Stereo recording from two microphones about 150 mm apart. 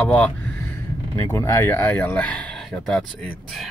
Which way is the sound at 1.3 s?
20° left (ahead or behind).